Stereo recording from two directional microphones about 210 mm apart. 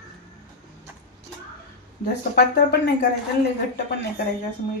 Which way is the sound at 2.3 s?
50° left (ahead or behind).